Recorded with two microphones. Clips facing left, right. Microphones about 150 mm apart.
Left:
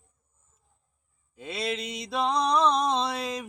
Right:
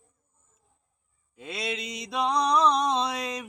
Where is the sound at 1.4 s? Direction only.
Centre (ahead or behind).